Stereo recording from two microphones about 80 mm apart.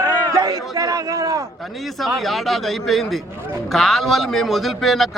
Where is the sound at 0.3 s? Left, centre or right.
Right.